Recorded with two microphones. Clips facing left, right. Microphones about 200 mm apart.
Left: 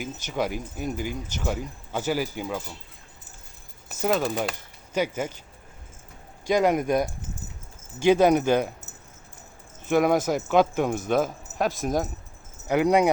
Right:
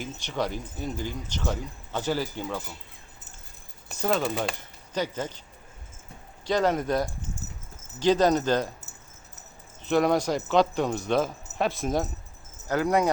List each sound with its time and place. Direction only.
0.3 s speech: 10° left (ahead or behind)
3.8 s speech: centre (ahead or behind)
6.5 s speech: 15° left (ahead or behind)
10.0 s speech: 5° left (ahead or behind)
12.6 s speech: 15° left (ahead or behind)